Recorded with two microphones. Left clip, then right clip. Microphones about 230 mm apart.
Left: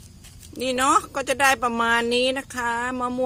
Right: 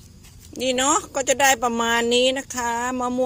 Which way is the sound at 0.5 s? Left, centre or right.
Centre.